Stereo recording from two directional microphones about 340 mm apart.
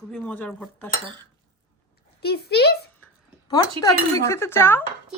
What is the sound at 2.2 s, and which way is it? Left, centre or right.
Speech, left.